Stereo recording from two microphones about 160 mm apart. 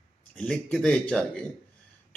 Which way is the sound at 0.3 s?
5° left (ahead or behind).